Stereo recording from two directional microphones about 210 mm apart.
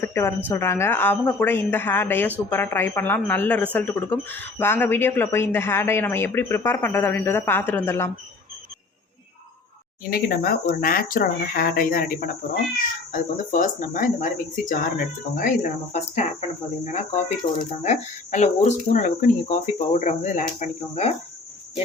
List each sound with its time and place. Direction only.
0.0 s speech: 10° left (ahead or behind)
10.1 s speech: 45° left (ahead or behind)